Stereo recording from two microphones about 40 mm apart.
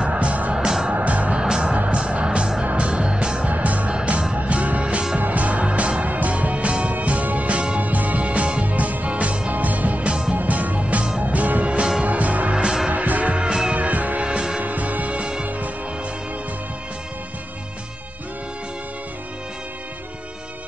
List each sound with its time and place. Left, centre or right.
0.0 s music: right
1.4 s music: centre
1.9 s music: right
3.4 s music: right
6.0 s music: right
8.6 s music: right
12.6 s music: centre
12.9 s music: right
13.4 s music: centre
13.7 s music: right
14.2 s music: right
14.6 s music: right